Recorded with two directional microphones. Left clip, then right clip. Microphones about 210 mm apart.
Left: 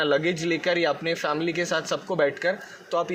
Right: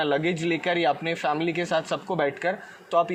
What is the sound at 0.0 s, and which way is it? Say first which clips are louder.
Speech: left 1 dB; 30° right (ahead or behind).